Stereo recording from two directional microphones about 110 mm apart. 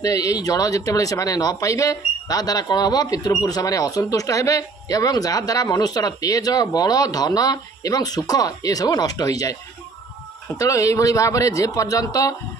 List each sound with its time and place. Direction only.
0.0 s speech: 30° left (ahead or behind)
10.6 s speech: 30° left (ahead or behind)